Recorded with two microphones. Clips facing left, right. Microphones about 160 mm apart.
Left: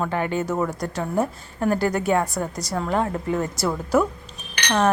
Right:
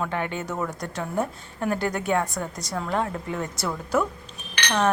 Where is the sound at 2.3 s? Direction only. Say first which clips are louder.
Left 4 dB; 35° left (ahead or behind).